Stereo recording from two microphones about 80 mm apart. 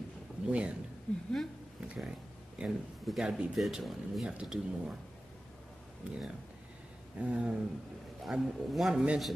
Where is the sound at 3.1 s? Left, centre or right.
Centre.